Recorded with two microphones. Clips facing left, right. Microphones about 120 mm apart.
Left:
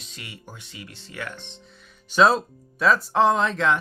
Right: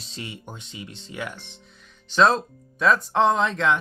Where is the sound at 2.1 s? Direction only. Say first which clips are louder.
Left 1 dB; 5° left (ahead or behind).